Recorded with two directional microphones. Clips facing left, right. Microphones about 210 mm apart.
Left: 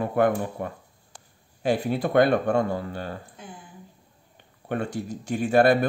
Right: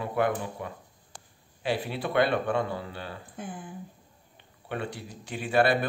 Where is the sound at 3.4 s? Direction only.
50° right (ahead or behind).